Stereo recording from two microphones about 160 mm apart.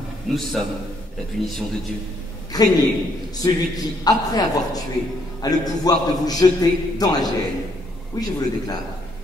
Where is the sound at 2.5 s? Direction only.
25° left (ahead or behind).